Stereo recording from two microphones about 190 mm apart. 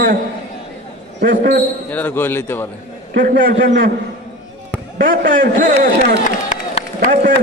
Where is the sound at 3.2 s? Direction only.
45° right (ahead or behind).